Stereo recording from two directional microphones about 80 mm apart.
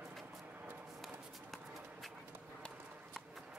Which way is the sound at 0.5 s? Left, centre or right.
Right.